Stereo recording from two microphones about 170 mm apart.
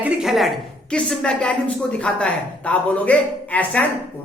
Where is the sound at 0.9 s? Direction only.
5° left (ahead or behind).